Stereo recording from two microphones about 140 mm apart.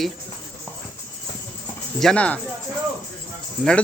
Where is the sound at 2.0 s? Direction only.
5° left (ahead or behind).